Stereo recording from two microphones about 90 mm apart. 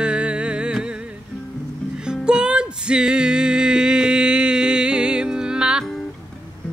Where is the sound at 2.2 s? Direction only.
10° right (ahead or behind).